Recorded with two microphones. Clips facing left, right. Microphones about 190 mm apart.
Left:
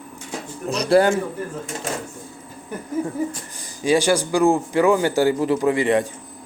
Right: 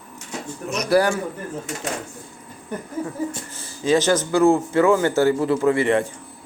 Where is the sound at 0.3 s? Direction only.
30° left (ahead or behind).